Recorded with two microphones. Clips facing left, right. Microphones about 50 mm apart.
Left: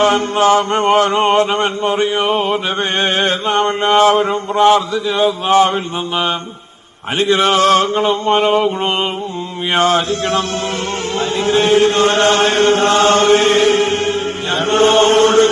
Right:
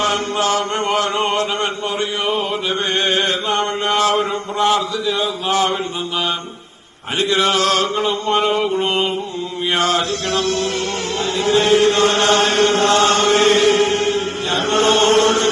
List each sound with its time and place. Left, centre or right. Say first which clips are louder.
0.0 s chant: left 6 dB; left